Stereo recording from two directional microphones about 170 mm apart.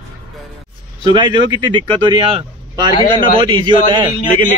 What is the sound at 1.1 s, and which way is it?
A man's voice, 25° right (ahead or behind).